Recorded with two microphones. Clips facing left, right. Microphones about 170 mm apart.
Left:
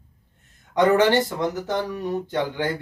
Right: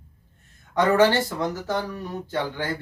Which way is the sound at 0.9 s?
20° left (ahead or behind).